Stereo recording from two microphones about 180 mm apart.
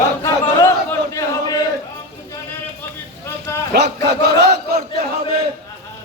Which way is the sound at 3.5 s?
15° left (ahead or behind).